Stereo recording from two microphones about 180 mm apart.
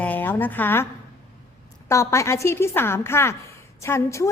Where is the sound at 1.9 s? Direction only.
15° left (ahead or behind).